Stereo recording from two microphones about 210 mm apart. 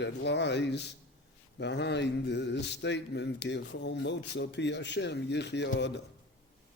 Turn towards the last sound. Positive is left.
turn(degrees=55)  # may be behind; listen again after turning